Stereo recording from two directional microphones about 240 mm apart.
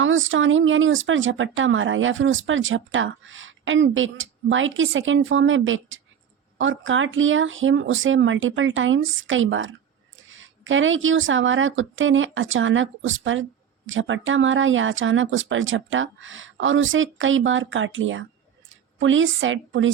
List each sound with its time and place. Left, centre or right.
0.0 s speech: right